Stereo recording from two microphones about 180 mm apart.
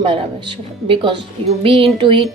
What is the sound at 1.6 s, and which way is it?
Music, 30° right (ahead or behind).